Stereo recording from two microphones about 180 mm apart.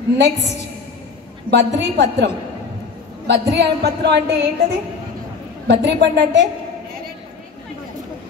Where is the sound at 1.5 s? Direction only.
75° right (ahead or behind).